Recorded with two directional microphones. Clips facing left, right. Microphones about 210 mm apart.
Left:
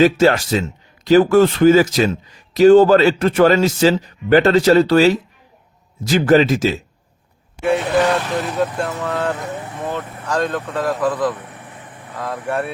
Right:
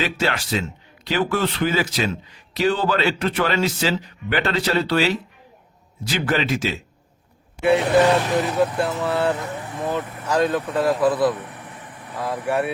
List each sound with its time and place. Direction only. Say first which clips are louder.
0.0 s a man's voice: left 11 dB; 45° left (ahead or behind)
7.6 s speech: even; 5° right (ahead or behind)
8.0 s speech: right 1 dB; 15° right (ahead or behind)
8.7 s speech: even; centre (ahead or behind)
9.0 s speech: even; 10° right (ahead or behind)